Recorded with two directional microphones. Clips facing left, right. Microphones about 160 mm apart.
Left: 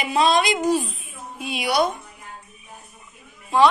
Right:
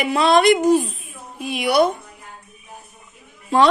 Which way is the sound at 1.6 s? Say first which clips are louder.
Right 5 dB; 55° right (ahead or behind).